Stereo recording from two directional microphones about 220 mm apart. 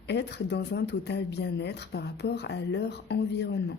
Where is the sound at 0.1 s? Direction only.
50° left (ahead or behind).